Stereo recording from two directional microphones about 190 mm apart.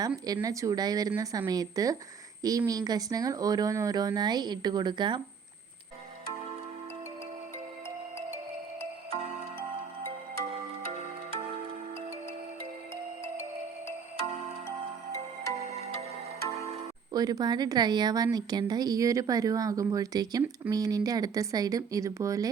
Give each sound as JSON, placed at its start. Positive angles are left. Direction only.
{"t": 0.3, "sound": "speech", "side_deg": -15}
{"t": 15.6, "sound": "music", "side_deg": -35}
{"t": 17.1, "sound": "speech", "side_deg": -20}